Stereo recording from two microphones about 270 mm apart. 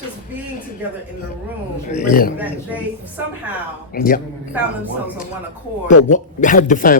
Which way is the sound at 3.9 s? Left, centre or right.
Left.